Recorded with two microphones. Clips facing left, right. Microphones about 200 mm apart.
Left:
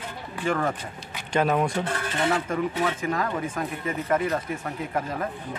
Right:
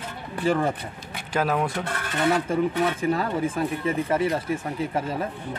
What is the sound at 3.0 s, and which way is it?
Speech, 30° right (ahead or behind).